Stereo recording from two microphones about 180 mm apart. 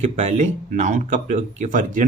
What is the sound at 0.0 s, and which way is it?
Speech, 40° right (ahead or behind).